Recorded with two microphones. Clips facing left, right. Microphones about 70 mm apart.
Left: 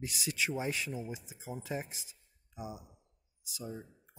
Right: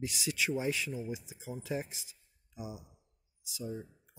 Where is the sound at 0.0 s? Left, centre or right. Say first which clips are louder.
Right 1 dB; left.